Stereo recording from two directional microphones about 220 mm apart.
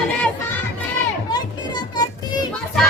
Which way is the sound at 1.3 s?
20° left (ahead or behind).